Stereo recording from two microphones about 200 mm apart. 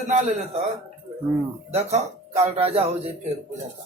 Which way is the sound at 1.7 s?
35° right (ahead or behind).